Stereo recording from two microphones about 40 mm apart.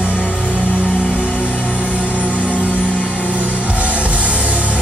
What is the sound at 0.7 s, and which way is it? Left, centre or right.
Music, right.